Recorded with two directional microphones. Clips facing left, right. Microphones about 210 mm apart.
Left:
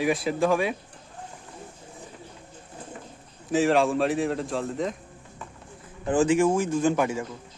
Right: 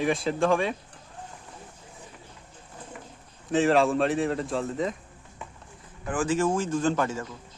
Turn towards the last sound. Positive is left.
turn(degrees=10)  # may be behind; listen again after turning